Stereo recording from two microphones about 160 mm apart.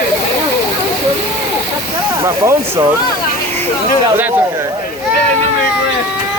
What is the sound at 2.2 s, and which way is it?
Speech, 20° right (ahead or behind).